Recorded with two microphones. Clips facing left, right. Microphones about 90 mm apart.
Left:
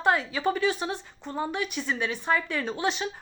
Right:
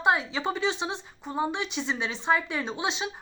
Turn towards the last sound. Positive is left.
turn(degrees=-20)  # may be behind; listen again after turning